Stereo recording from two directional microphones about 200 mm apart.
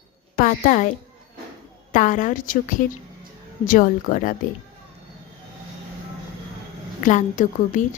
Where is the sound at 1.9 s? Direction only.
40° left (ahead or behind).